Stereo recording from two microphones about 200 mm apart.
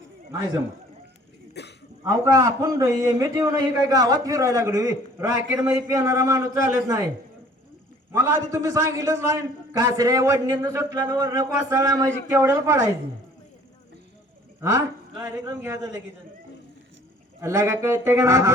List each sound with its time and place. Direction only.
1.6 s throat clearing: 60° left (ahead or behind)
2.0 s a man's voice: 15° right (ahead or behind)
8.1 s a man's voice: 15° right (ahead or behind)
14.6 s a man's voice: 15° right (ahead or behind)
17.4 s a man's voice: 15° right (ahead or behind)